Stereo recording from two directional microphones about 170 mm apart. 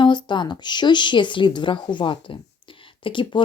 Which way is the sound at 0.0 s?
25° left (ahead or behind).